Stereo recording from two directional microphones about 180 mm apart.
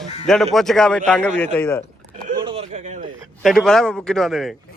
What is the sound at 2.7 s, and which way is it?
Speech, 45° right (ahead or behind).